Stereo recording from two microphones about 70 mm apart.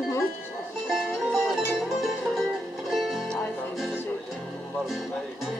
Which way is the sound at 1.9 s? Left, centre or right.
Centre.